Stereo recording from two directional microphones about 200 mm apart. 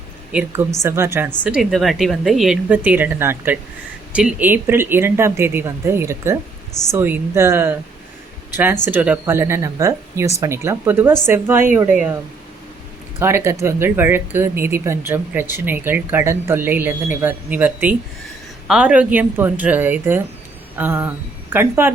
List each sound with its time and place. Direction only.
0.3 s a woman's voice: 5° right (ahead or behind)
13.1 s speech: 10° right (ahead or behind)